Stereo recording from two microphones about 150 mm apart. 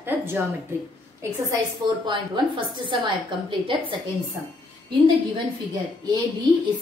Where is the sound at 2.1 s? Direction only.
35° right (ahead or behind).